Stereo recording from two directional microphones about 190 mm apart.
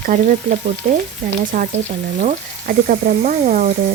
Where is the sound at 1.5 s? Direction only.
45° right (ahead or behind).